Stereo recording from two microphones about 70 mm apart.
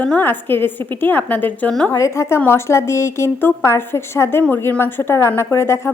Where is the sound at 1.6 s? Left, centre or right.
Centre.